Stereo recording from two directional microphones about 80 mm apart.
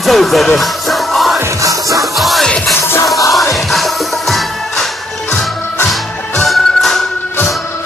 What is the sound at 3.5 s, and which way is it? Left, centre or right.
Music, centre.